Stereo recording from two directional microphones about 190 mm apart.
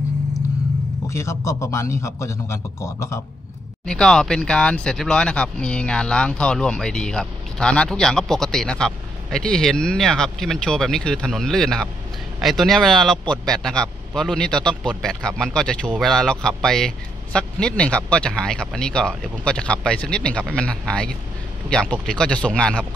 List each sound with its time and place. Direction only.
1.1 s a man's voice: 15° left (ahead or behind)
3.8 s speech: 5° left (ahead or behind)